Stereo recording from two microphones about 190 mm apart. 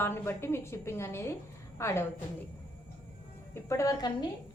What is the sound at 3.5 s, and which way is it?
Speech, 15° left (ahead or behind).